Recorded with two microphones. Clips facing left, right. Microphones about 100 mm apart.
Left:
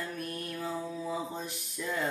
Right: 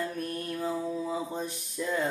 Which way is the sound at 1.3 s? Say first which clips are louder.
Right 5 dB; 30° right (ahead or behind).